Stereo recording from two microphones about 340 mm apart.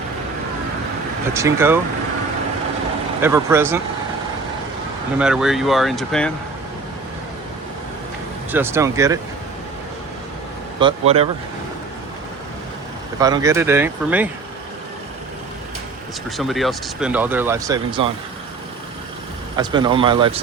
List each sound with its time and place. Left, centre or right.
1.3 s speech: centre
3.2 s speech: centre
5.2 s speech: centre
8.5 s speech: centre
10.8 s speech: centre
13.1 s speech: centre
16.4 s speech: centre
19.5 s speech: centre